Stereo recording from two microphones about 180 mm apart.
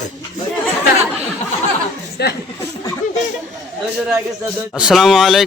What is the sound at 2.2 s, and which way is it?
Speech, 65° left (ahead or behind).